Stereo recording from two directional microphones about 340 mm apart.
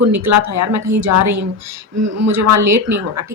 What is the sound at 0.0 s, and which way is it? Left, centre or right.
Speech, right.